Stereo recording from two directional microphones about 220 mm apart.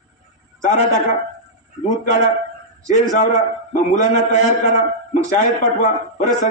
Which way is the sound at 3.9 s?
35° left (ahead or behind).